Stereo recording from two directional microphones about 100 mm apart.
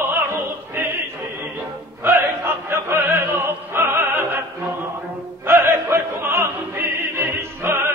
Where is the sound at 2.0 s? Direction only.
25° right (ahead or behind).